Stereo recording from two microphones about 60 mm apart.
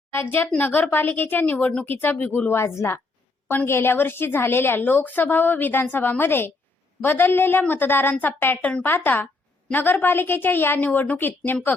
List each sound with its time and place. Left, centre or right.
0.3 s a woman's voice: left
2.5 s a woman's voice: left
8.9 s a woman's voice: left